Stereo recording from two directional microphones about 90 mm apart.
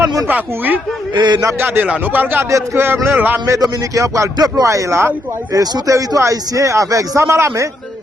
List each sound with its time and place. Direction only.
0.3 s speech: 20° right (ahead or behind)
1.1 s speech: 55° right (ahead or behind)
1.5 s speech: 25° right (ahead or behind)
3.4 s a man's voice: 35° right (ahead or behind)